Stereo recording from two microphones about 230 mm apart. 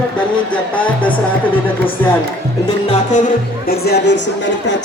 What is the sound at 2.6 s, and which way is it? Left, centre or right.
Speech, left.